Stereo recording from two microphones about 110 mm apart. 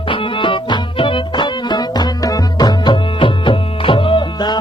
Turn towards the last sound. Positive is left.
turn(degrees=45)  # may be behind; listen again after turning